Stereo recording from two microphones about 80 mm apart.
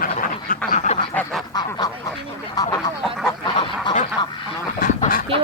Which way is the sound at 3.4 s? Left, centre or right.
Left.